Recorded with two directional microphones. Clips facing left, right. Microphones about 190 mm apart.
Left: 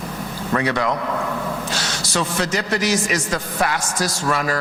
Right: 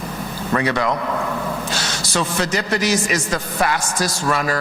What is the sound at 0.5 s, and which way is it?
Speech, 25° right (ahead or behind).